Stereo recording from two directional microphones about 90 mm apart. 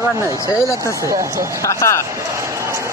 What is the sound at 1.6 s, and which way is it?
Speech, 35° left (ahead or behind).